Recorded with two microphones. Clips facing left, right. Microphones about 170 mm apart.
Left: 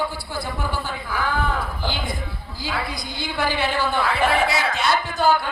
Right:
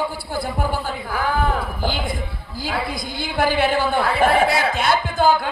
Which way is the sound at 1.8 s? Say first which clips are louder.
Right 3 dB; 50° right (ahead or behind).